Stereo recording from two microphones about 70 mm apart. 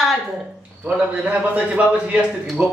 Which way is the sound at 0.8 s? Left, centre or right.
Centre.